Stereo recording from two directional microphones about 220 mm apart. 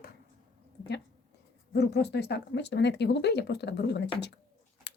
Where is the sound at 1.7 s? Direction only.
50° left (ahead or behind).